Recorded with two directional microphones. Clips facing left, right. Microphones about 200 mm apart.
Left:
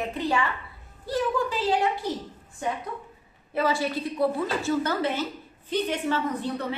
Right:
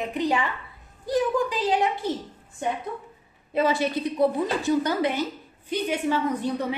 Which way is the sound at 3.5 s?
20° right (ahead or behind).